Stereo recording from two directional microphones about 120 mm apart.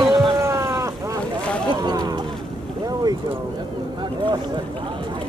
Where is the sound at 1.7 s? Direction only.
35° right (ahead or behind).